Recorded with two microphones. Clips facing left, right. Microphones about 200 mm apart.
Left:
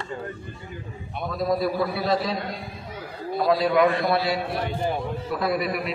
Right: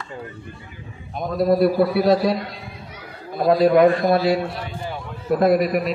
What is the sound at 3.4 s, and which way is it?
A man's voice, 50° right (ahead or behind).